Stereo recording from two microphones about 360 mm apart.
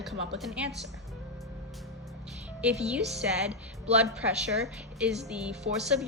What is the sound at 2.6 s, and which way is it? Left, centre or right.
Speech, centre.